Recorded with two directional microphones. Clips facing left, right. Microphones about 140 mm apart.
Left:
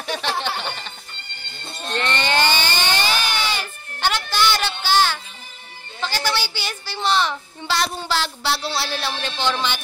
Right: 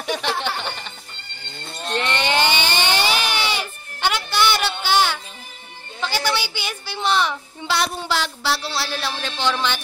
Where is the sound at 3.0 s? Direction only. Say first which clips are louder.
Right 1 dB; 10° right (ahead or behind).